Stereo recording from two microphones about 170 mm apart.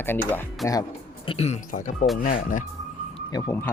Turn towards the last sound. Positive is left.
turn(degrees=15)  # may be behind; listen again after turning